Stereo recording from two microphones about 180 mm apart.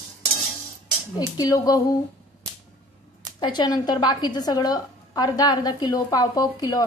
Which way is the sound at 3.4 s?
25° left (ahead or behind).